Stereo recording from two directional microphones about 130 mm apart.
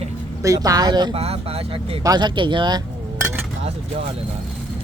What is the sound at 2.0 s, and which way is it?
Speech, 35° right (ahead or behind).